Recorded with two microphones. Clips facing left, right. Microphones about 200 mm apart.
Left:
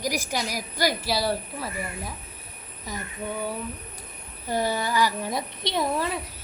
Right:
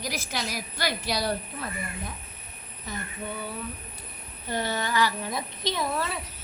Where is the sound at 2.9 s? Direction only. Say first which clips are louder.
Left 1 dB; 10° left (ahead or behind).